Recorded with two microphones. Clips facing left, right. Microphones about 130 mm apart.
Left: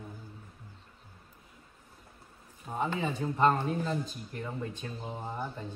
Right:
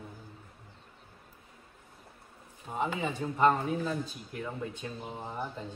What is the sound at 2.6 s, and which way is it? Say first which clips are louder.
A man's voice: even; 10° right (ahead or behind).